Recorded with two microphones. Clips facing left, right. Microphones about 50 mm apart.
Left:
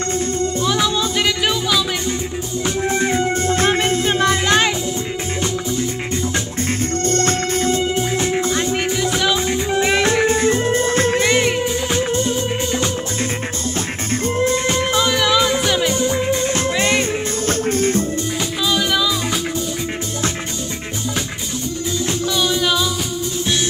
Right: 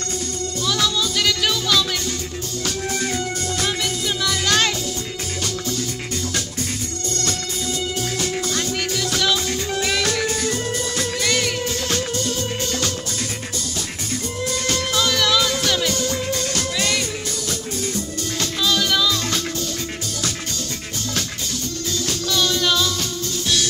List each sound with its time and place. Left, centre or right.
0.4 s music: left
4.5 s music: centre
7.1 s music: left
14.4 s music: left
17.5 s music: left
18.7 s music: centre
22.3 s music: centre